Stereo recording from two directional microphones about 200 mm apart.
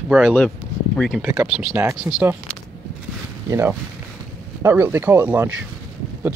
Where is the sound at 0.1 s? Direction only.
5° left (ahead or behind).